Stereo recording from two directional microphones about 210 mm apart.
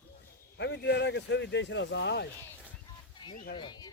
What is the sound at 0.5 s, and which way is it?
Speech, 55° left (ahead or behind).